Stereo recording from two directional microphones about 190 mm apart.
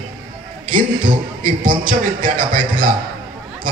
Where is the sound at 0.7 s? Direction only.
45° right (ahead or behind).